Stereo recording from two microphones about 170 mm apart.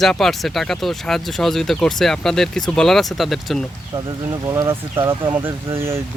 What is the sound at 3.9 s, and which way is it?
Speech, 20° right (ahead or behind).